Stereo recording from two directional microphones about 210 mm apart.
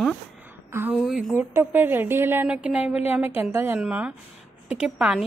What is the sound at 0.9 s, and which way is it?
A woman's voice, centre (ahead or behind).